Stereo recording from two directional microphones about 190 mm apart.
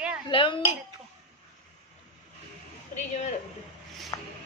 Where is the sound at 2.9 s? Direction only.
35° left (ahead or behind).